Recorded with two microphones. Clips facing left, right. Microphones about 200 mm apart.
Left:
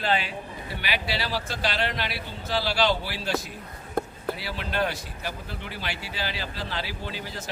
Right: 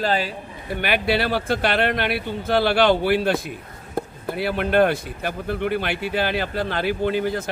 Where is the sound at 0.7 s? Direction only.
55° right (ahead or behind).